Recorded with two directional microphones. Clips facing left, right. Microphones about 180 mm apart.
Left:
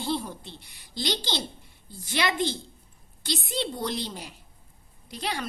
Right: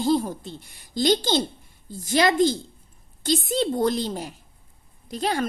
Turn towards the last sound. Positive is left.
turn(degrees=-45)  # may be behind; listen again after turning